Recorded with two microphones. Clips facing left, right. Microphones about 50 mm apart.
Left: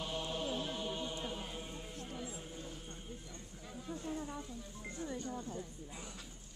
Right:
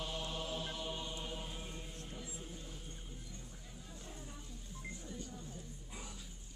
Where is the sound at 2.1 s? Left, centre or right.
Left.